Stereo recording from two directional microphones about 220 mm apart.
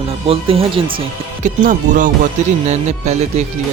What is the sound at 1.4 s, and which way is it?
Speech, 35° right (ahead or behind).